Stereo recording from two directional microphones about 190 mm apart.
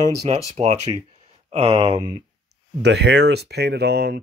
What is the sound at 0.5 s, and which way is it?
Speech, 35° right (ahead or behind).